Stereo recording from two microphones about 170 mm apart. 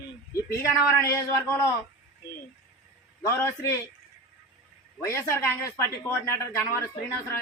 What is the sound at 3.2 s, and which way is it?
Speech, 15° left (ahead or behind).